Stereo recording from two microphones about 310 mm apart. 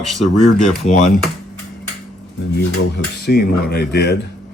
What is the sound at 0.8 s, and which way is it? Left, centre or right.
Speech, left.